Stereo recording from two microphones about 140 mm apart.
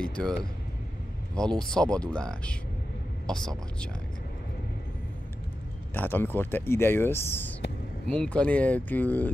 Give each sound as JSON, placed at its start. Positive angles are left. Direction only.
{"t": 0.0, "sound": "speech", "side_deg": 5}
{"t": 5.9, "sound": "speech", "side_deg": 15}